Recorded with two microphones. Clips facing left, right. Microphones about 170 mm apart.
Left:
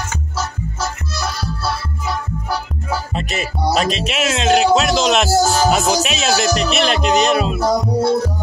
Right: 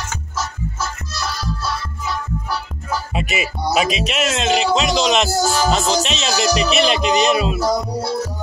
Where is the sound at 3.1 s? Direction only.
5° right (ahead or behind).